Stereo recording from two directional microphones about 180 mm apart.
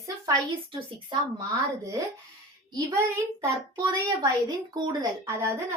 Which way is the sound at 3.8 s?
25° right (ahead or behind).